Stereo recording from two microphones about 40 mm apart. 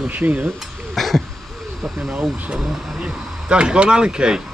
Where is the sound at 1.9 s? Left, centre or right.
Centre.